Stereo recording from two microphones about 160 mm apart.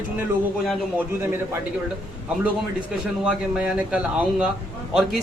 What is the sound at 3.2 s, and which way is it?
A man's voice, 5° right (ahead or behind).